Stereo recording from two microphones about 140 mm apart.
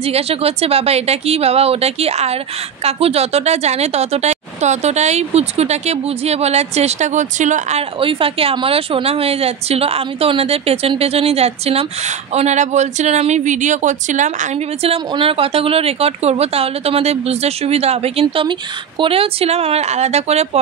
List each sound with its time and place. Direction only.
0.0 s speech: 45° right (ahead or behind); by 7.8 s 60° right (ahead or behind)
8.0 s speech: 40° right (ahead or behind); by 14.9 s 60° right (ahead or behind)
14.9 s speech: 40° right (ahead or behind)